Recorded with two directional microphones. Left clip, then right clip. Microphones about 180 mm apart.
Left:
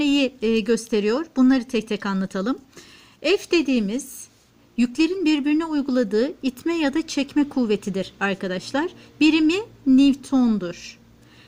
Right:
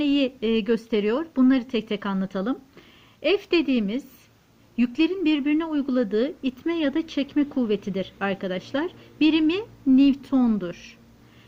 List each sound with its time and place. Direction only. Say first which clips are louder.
0.0 s speech: left 2 dB; 30° left (ahead or behind)